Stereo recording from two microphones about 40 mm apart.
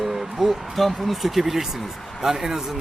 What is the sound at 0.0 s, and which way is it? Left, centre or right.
Speech, centre.